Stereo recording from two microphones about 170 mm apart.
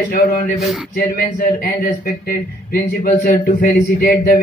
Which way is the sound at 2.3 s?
55° left (ahead or behind).